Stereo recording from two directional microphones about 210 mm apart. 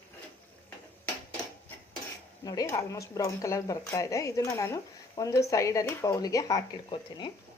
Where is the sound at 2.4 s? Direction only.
15° left (ahead or behind).